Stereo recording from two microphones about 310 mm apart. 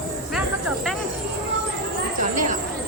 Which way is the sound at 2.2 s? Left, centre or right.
Right.